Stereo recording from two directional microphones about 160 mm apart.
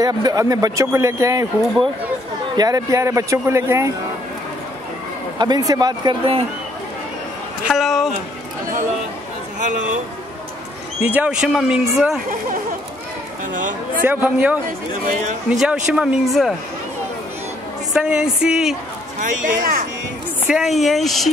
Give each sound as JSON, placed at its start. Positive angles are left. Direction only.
{"t": 0.0, "sound": "speech", "side_deg": -25}
{"t": 2.5, "sound": "speech", "side_deg": -25}
{"t": 5.4, "sound": "speech", "side_deg": -25}
{"t": 7.6, "sound": "speech", "side_deg": 0}
{"t": 11.0, "sound": "speech", "side_deg": -10}
{"t": 14.0, "sound": "a man's voice", "side_deg": -10}
{"t": 17.9, "sound": "speech", "side_deg": -5}
{"t": 19.1, "sound": "speech", "side_deg": -55}
{"t": 20.4, "sound": "speech", "side_deg": -5}